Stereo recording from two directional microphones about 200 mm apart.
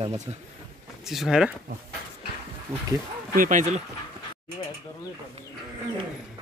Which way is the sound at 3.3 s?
40° right (ahead or behind).